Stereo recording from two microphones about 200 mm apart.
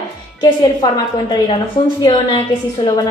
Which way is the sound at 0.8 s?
20° left (ahead or behind).